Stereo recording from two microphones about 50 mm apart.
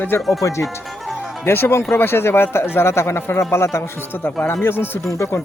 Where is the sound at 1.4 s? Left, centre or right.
Left.